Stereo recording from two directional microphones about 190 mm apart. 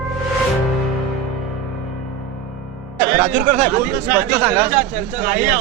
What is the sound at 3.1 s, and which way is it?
Speech, 45° right (ahead or behind).